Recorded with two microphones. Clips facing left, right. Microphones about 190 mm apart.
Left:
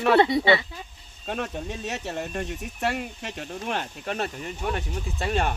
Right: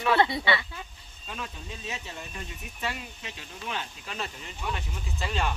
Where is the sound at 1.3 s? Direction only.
60° left (ahead or behind).